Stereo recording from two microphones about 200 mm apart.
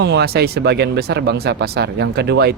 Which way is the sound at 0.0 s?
55° right (ahead or behind).